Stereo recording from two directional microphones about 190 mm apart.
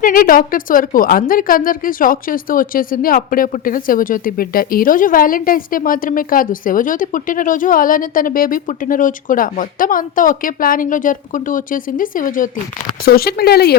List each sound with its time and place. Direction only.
0.0 s a woman's voice: 45° left (ahead or behind)